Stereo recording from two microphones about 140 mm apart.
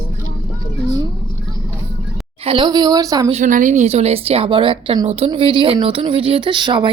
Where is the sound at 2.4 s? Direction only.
40° right (ahead or behind).